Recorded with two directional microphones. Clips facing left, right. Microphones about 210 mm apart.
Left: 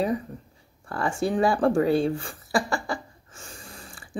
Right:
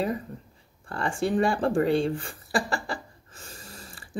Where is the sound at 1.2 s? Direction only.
Centre (ahead or behind).